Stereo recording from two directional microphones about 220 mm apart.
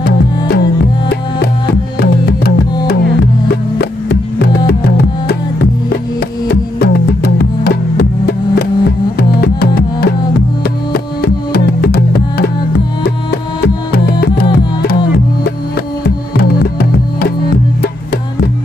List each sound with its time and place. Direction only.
0.0 s music: 45° left (ahead or behind)
1.7 s music: 45° left (ahead or behind)
3.7 s music: 45° left (ahead or behind)
6.5 s music: 45° left (ahead or behind)
9.4 s music: 45° left (ahead or behind)
13.9 s music: 45° left (ahead or behind)
16.0 s music: 50° left (ahead or behind)